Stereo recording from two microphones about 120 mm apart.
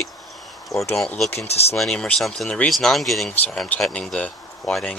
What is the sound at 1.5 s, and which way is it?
Speech, 60° left (ahead or behind).